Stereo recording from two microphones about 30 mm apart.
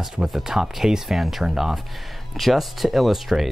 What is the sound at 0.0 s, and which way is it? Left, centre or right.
Speech, centre.